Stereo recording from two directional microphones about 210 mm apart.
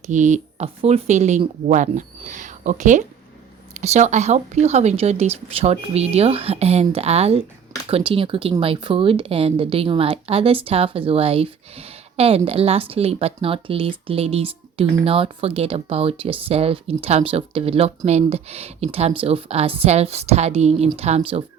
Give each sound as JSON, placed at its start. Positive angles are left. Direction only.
{"t": 0.1, "sound": "speech", "side_deg": -35}